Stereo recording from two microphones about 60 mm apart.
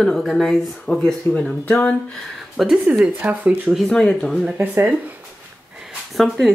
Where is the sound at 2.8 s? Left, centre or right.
Centre.